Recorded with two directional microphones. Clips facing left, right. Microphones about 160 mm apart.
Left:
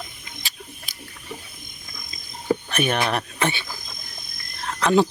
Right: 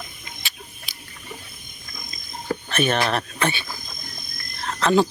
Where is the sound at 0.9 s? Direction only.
45° left (ahead or behind).